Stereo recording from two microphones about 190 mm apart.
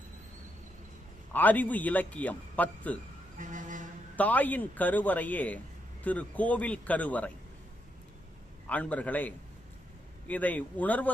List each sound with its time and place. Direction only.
1.3 s a man's voice: 10° left (ahead or behind)
3.3 s vehicle: 40° right (ahead or behind)
4.2 s a man's voice: 10° left (ahead or behind)
8.7 s a man's voice: 5° left (ahead or behind)